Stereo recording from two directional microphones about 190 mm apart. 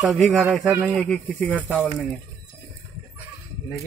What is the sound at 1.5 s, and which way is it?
Speech, 10° right (ahead or behind).